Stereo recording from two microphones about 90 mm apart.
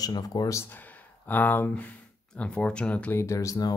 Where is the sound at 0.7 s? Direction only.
20° left (ahead or behind).